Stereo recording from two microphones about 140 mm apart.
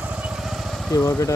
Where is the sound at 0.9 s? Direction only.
20° left (ahead or behind).